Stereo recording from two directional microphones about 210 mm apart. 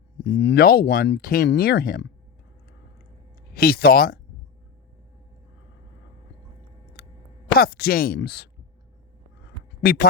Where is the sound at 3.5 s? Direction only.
45° left (ahead or behind).